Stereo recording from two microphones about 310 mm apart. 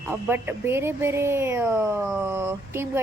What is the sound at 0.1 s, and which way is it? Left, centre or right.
A woman's voice, centre.